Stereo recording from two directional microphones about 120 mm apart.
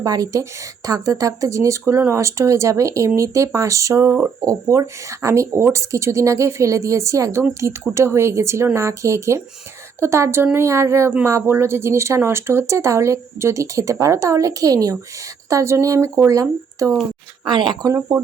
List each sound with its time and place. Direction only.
0.0 s speech: 30° right (ahead or behind)
17.4 s speech: 40° right (ahead or behind)